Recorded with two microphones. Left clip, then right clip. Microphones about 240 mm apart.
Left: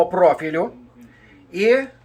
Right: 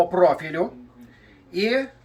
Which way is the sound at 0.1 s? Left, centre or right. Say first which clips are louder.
Left 3 dB; centre.